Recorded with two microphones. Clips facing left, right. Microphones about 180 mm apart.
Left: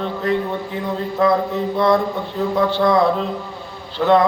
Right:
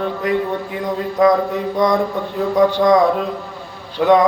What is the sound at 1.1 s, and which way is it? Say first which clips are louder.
Speech: right 3 dB; 15° right (ahead or behind).